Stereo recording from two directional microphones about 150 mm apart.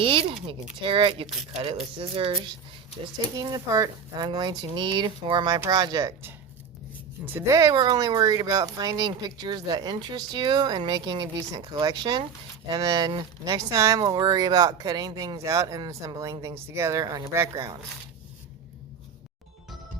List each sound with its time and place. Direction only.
0.0 s speech: 40° right (ahead or behind)
1.3 s speech: 5° right (ahead or behind)
2.0 s speech: 40° right (ahead or behind)
3.0 s speech: 25° right (ahead or behind)